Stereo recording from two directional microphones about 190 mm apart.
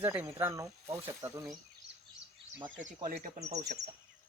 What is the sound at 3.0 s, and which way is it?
Speech, 40° right (ahead or behind).